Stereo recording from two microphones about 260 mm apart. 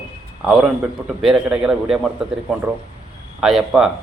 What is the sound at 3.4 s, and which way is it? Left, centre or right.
Speech, centre.